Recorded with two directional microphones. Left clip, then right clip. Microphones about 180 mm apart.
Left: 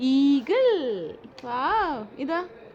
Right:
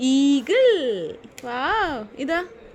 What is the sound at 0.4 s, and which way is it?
Speech, centre (ahead or behind).